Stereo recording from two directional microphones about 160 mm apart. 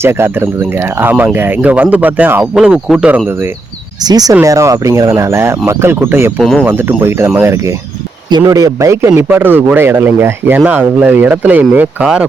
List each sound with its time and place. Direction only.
0.0 s a man's voice: 15° right (ahead or behind)
6.4 s speech: centre (ahead or behind)
6.7 s a man's voice: 15° right (ahead or behind)